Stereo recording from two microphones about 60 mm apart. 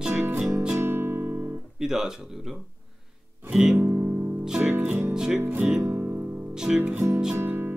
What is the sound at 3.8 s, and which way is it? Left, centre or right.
Music, right.